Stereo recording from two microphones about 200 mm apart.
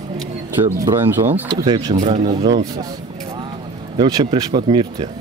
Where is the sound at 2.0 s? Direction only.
35° right (ahead or behind).